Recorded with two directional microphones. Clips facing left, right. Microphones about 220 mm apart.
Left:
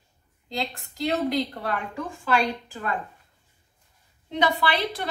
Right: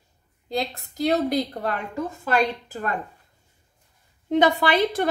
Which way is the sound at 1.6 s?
45° right (ahead or behind).